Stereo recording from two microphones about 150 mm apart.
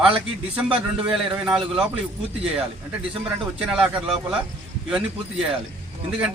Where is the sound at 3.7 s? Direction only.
5° right (ahead or behind).